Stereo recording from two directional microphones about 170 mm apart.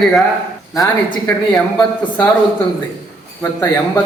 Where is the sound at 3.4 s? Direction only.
20° left (ahead or behind).